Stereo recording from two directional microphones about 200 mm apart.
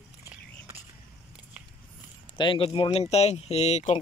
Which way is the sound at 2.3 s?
25° left (ahead or behind).